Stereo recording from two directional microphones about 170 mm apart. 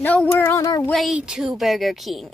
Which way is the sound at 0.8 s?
5° left (ahead or behind).